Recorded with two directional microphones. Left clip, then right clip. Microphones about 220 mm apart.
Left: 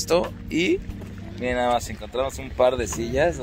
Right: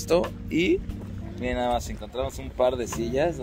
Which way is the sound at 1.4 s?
15° left (ahead or behind).